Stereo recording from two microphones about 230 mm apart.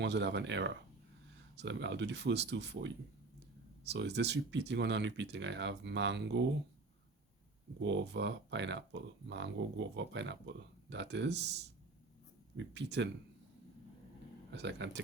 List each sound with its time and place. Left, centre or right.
0.0 s speech: right
7.8 s speech: right
14.5 s speech: right